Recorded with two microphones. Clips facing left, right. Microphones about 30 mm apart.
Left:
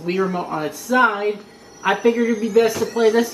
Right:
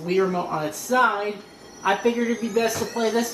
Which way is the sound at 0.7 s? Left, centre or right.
Left.